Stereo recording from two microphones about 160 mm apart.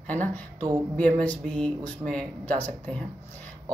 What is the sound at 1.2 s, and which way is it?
Speech, 10° left (ahead or behind).